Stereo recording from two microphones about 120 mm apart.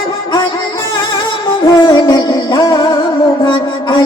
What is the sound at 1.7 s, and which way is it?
Music, 40° left (ahead or behind).